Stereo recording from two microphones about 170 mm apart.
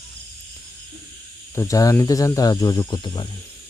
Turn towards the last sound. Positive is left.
turn(degrees=25)  # may be behind; listen again after turning